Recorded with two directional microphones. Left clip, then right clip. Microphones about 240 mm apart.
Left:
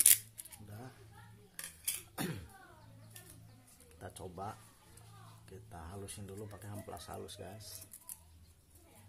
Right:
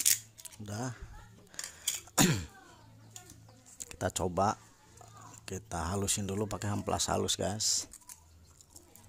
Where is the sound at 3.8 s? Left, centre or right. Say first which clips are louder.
Right 15 dB; right.